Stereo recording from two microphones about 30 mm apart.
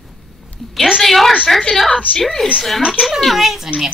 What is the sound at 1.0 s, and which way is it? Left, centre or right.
Speech, centre.